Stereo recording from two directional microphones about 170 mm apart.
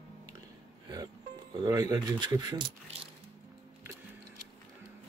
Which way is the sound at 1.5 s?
20° right (ahead or behind).